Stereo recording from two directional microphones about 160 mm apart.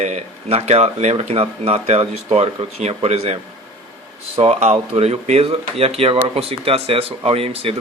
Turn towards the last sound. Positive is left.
turn(degrees=-35)  # may be behind; listen again after turning